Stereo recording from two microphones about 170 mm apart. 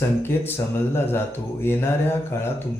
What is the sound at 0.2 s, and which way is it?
Speech, 15° left (ahead or behind).